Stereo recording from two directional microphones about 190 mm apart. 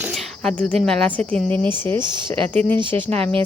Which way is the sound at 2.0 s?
25° right (ahead or behind).